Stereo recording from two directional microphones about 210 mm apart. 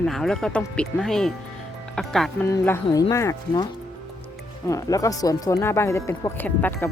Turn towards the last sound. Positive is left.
turn(degrees=10)  # may be behind; listen again after turning